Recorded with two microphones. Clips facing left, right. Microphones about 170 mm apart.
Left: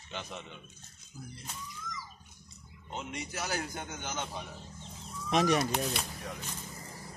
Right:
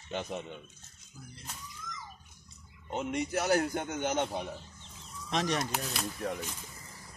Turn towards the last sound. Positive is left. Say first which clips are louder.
# left 4 dB
turn(degrees=0)  # may be behind; listen again after turning